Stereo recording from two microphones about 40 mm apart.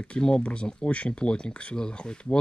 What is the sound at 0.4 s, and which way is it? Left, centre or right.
Speech, left.